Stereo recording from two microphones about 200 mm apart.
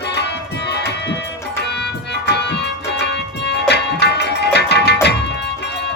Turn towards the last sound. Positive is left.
turn(degrees=55)  # may be behind; listen again after turning